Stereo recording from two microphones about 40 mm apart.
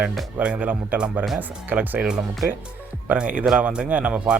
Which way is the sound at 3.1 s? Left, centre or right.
Right.